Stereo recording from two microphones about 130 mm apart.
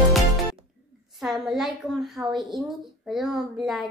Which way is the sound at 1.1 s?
Centre (ahead or behind).